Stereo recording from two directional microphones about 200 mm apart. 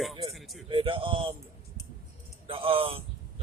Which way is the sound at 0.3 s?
Centre (ahead or behind).